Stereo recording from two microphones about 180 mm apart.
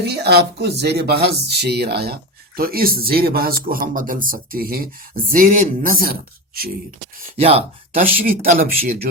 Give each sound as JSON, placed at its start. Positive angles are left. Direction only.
{"t": 0.0, "sound": "speech", "side_deg": -65}
{"t": 7.3, "sound": "speech", "side_deg": -30}
{"t": 8.0, "sound": "speech", "side_deg": -50}